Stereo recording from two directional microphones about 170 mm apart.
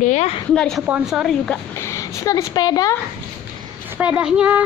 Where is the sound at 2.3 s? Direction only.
20° left (ahead or behind).